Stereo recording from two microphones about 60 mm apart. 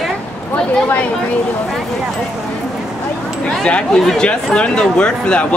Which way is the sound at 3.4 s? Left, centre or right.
Centre.